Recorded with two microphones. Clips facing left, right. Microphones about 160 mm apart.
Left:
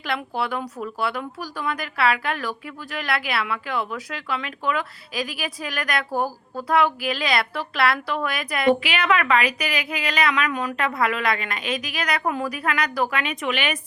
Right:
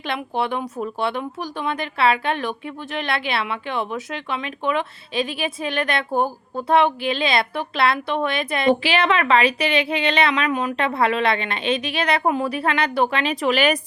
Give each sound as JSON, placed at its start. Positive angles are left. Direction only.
{"t": 0.0, "sound": "speech", "side_deg": -20}